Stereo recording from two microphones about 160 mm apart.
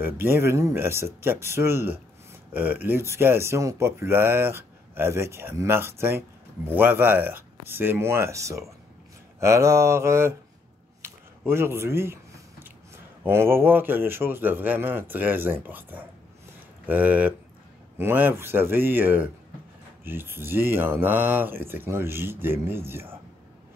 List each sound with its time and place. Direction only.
0.0 s speech: 15° right (ahead or behind)
11.0 s a sound: 15° right (ahead or behind)
13.2 s speech: 15° right (ahead or behind)